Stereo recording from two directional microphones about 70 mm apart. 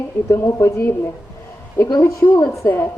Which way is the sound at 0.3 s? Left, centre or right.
Left.